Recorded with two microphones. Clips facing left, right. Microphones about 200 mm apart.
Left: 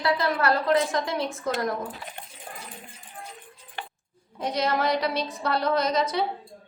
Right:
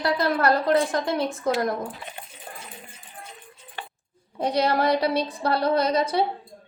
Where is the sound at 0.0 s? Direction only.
45° right (ahead or behind).